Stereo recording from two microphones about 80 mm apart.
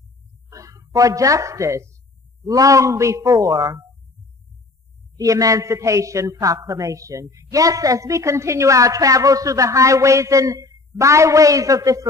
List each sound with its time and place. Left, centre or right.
0.5 s a woman's voice: right
5.1 s a woman's voice: right